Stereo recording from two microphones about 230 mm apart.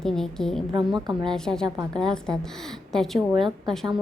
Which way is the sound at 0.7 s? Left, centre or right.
Centre.